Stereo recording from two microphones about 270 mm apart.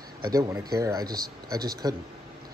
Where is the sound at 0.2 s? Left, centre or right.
Centre.